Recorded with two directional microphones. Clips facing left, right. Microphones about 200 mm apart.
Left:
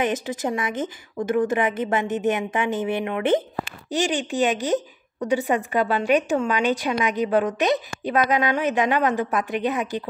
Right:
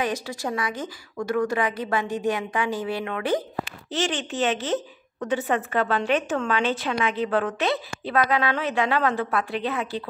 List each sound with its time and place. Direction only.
0.0 s a woman's voice: 20° left (ahead or behind)